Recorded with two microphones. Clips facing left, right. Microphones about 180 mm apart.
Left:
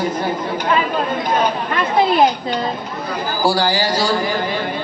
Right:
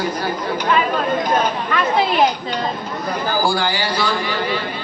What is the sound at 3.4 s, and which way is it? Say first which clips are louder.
Speech: left 3 dB; 35° left (ahead or behind).